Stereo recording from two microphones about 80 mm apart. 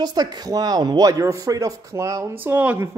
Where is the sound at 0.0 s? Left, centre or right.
Right.